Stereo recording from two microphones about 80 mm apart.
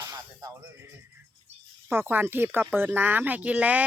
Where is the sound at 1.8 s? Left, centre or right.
Right.